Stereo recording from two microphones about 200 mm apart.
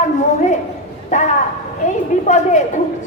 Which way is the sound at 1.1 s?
40° left (ahead or behind).